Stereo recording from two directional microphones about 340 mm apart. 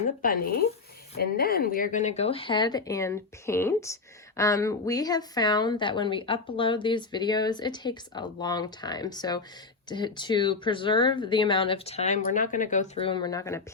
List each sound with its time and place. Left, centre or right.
1.1 s a woman's voice: left; by 13.6 s centre